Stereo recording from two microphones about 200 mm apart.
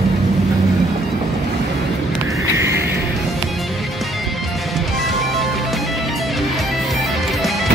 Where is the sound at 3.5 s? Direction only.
Centre (ahead or behind).